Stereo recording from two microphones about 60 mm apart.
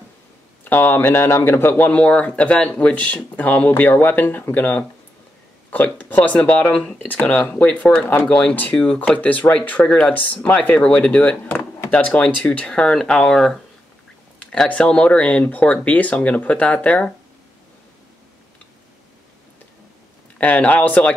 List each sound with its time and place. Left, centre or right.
0.7 s speech: left
1.9 s speech: centre
5.9 s speech: left
20.3 s speech: left